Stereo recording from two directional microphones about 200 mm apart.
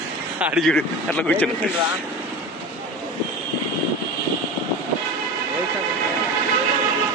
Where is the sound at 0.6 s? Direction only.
5° left (ahead or behind).